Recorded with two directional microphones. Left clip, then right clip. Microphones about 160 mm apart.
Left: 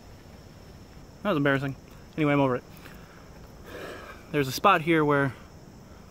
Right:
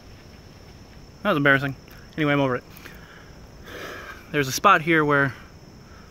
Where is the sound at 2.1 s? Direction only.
10° left (ahead or behind).